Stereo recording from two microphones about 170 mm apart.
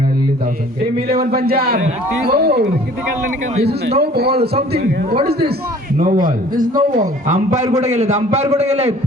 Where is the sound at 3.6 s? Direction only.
70° right (ahead or behind).